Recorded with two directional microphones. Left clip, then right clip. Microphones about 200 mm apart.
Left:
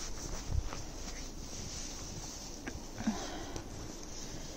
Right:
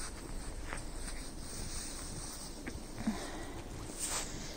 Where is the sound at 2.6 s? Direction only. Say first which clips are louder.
Left 2 dB; 5° left (ahead or behind).